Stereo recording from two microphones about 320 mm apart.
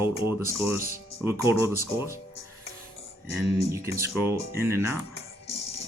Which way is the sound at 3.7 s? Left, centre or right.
Centre.